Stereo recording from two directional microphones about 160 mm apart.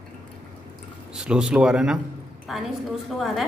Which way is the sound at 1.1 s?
5° right (ahead or behind).